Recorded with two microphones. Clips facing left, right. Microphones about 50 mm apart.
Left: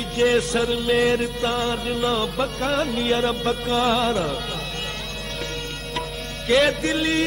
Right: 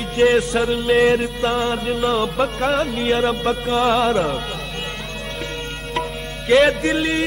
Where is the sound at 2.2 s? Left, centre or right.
Right.